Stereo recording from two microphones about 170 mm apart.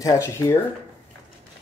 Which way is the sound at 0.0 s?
20° left (ahead or behind).